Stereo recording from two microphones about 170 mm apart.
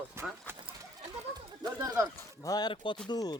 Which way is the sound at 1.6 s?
20° right (ahead or behind).